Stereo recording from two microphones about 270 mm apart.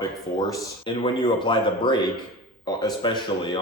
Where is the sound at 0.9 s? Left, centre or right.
Centre.